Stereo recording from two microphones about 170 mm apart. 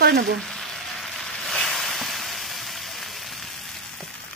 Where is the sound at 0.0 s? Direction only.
70° right (ahead or behind).